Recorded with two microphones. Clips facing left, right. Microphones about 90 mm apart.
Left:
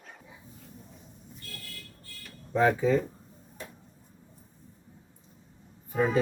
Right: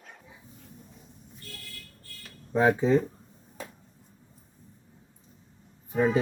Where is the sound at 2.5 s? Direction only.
20° right (ahead or behind).